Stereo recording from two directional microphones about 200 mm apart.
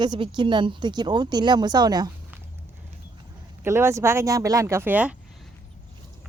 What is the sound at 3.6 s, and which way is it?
Speech, 15° right (ahead or behind).